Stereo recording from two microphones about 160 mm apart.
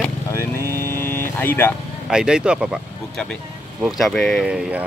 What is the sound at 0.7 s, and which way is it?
Music, 15° left (ahead or behind).